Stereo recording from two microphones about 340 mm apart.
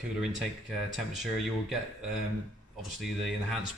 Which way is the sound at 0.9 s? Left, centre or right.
Centre.